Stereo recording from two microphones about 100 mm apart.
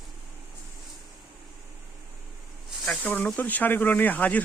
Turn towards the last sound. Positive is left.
turn(degrees=15)  # may be behind; listen again after turning